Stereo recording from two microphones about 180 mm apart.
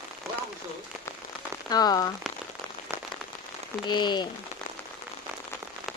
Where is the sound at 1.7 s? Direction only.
20° left (ahead or behind).